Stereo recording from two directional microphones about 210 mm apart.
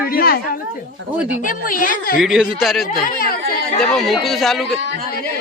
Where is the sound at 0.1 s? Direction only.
45° left (ahead or behind).